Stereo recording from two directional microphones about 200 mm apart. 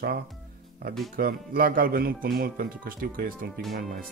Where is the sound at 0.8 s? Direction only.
50° right (ahead or behind).